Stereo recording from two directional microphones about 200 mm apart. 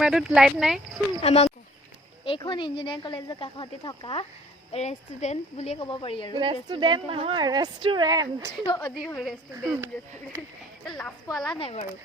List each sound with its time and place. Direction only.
0.0 s speech: 5° right (ahead or behind)
1.2 s speech: 30° left (ahead or behind)
6.3 s a woman's voice: 25° right (ahead or behind)
8.6 s speech: 20° left (ahead or behind)
9.0 s speech: centre (ahead or behind)
10.8 s speech: 5° left (ahead or behind)
11.5 s speech: 30° left (ahead or behind)